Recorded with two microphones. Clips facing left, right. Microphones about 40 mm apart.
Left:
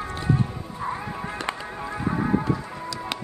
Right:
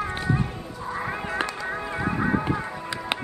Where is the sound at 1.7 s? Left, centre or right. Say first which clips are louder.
Right 3 dB; right.